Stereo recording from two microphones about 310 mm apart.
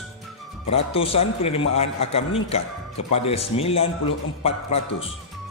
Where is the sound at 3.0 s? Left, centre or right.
Left.